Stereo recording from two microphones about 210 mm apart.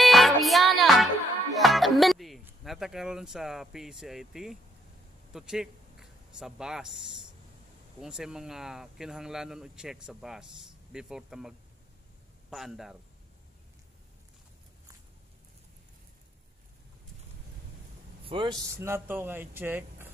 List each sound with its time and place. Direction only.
0.0 s music: centre (ahead or behind)
5.3 s speech: 5° right (ahead or behind)
18.2 s speech: 25° right (ahead or behind)
18.8 s speech: 10° right (ahead or behind)